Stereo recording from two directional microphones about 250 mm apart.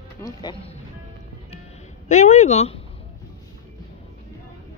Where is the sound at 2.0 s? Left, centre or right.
Left.